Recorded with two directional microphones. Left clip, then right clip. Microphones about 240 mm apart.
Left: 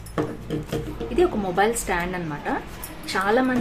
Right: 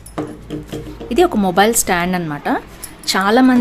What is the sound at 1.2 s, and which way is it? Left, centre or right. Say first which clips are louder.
A woman's voice: right 8 dB; right.